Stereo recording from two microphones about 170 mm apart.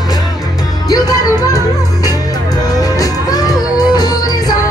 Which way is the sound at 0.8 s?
20° left (ahead or behind).